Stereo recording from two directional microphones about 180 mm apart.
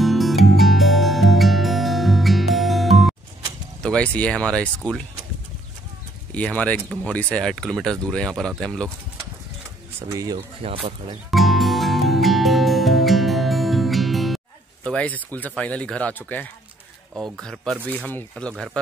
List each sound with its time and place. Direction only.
0.0 s music: centre (ahead or behind)
3.8 s speech: 5° left (ahead or behind)
6.3 s speech: 5° left (ahead or behind)
10.1 s speech: 20° right (ahead or behind)
10.6 s speech: 30° right (ahead or behind)
11.2 s music: centre (ahead or behind)
17.2 s speech: centre (ahead or behind)